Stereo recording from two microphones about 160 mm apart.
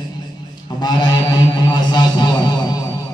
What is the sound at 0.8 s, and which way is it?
Speech, 25° left (ahead or behind).